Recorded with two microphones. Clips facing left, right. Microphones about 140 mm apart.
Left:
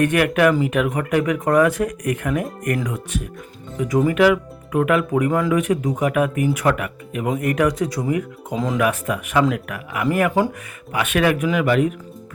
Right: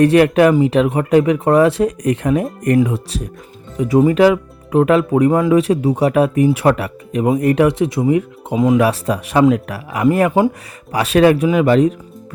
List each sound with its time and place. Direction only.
0.0 s speech: 30° right (ahead or behind)
8.8 s speech: 35° right (ahead or behind)